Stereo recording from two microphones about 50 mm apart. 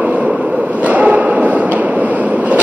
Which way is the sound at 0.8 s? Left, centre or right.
Right.